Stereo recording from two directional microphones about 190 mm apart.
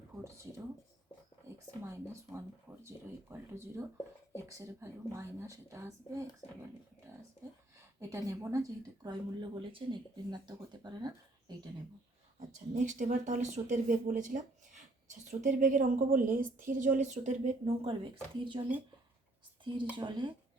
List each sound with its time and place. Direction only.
1.5 s a sound: 15° right (ahead or behind)
2.8 s speech: 15° right (ahead or behind)
8.1 s speech: 15° right (ahead or behind)
12.4 s a woman's voice: 40° right (ahead or behind)
19.6 s speech: 25° right (ahead or behind)